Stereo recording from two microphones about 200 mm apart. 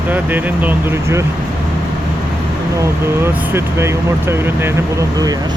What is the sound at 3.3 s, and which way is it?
Speech, 10° right (ahead or behind).